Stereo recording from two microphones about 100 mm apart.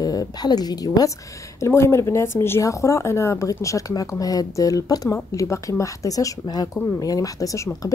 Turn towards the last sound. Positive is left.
turn(degrees=35)  # may be behind; listen again after turning